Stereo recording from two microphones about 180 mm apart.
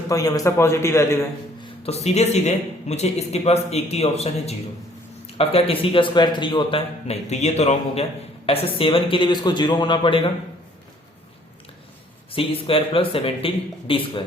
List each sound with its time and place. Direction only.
0.1 s a man's voice: 20° left (ahead or behind)
1.8 s a man's voice: 35° left (ahead or behind)
12.3 s a man's voice: 30° left (ahead or behind)